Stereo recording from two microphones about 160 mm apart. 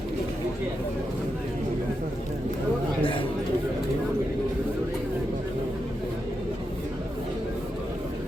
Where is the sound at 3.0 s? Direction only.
35° left (ahead or behind).